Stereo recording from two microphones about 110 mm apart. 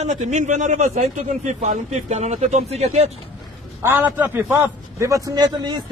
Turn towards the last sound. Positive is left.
turn(degrees=-40)  # may be behind; listen again after turning